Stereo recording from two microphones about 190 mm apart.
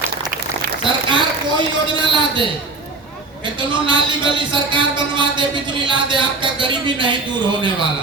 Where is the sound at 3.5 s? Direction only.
25° right (ahead or behind).